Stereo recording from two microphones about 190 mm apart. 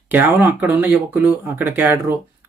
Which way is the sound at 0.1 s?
10° right (ahead or behind).